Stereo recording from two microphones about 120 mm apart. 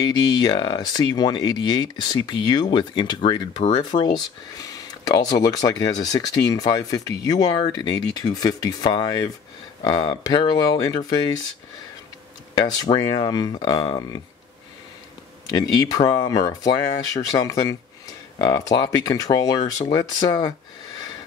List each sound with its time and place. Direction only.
0.0 s speech: 35° left (ahead or behind)
3.9 s speech: 60° left (ahead or behind)
4.6 s speech: 30° left (ahead or behind)
12.5 s speech: 35° left (ahead or behind)
15.5 s speech: 35° left (ahead or behind)